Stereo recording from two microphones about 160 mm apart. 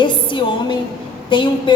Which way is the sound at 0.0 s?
30° left (ahead or behind).